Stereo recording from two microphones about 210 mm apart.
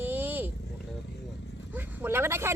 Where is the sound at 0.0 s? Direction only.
10° right (ahead or behind).